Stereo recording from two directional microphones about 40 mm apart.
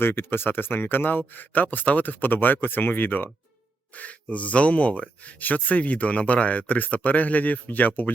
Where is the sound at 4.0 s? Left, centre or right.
Left.